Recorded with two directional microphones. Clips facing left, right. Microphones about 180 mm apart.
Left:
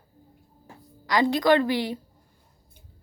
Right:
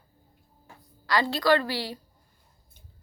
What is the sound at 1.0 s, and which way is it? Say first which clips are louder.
Speech: left 3 dB; 20° left (ahead or behind).